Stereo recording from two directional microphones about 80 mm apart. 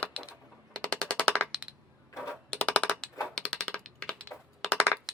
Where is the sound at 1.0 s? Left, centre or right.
Centre.